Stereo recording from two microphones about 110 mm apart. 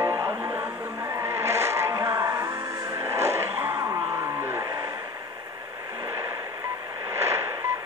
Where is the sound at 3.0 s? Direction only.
25° right (ahead or behind).